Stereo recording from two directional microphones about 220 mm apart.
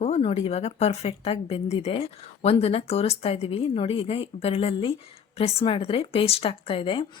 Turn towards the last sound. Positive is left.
turn(degrees=25)  # may be behind; listen again after turning